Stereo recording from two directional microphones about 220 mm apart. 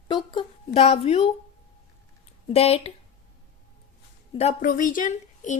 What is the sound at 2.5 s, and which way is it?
Speech, 25° left (ahead or behind).